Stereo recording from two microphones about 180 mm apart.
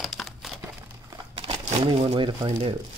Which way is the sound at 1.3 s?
30° right (ahead or behind).